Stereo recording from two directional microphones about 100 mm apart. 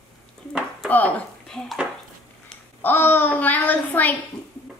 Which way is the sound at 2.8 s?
20° left (ahead or behind).